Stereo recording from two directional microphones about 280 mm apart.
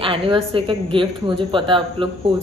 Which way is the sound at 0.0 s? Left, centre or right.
Centre.